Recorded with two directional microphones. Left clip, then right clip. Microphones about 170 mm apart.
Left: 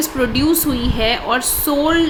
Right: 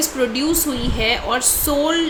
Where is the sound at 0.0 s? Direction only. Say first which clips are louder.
Left 2 dB; 25° left (ahead or behind).